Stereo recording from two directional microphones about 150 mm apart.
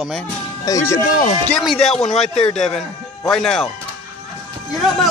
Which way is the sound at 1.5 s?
Centre (ahead or behind).